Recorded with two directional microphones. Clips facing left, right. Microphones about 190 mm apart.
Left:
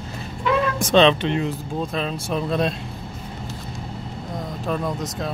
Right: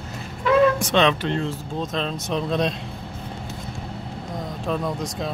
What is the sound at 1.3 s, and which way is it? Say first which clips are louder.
Speech: left 2 dB; 15° left (ahead or behind).